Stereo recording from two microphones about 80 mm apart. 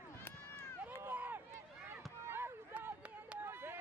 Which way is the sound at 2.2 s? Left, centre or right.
Right.